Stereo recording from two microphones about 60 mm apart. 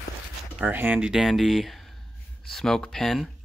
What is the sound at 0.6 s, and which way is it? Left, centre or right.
Speech, right.